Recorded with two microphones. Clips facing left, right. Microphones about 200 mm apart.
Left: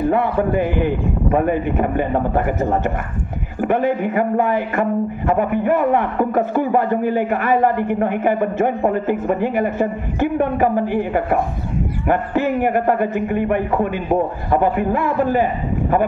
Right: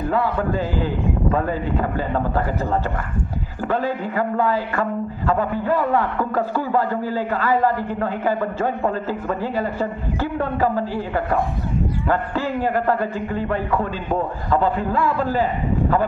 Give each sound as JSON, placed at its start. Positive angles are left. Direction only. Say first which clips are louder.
{"t": 0.1, "sound": "speech", "louder": "left 4 dB", "side_deg": 20}